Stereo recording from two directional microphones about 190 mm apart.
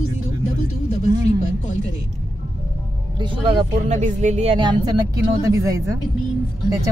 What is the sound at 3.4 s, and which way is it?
Speech, 35° right (ahead or behind).